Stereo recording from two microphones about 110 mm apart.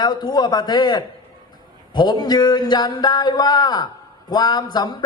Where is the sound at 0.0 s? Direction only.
45° left (ahead or behind).